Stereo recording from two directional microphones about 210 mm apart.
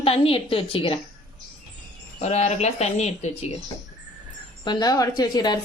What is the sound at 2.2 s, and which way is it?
Speech, 30° left (ahead or behind).